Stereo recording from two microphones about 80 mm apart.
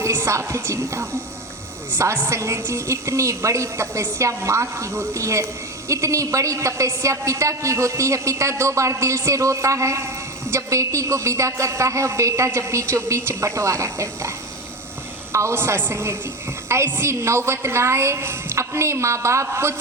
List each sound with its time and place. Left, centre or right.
0.0 s a woman's voice: right